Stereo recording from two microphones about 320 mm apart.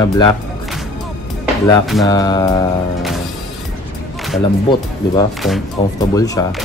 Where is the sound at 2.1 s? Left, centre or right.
Centre.